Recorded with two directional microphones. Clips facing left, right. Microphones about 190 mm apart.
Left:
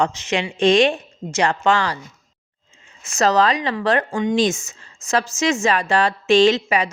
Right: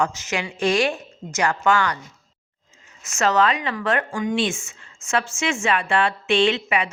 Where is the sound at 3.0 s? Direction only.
35° left (ahead or behind).